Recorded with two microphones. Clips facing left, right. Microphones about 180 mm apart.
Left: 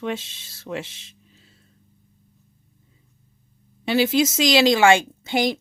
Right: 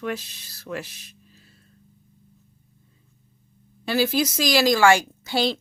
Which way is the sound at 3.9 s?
20° left (ahead or behind).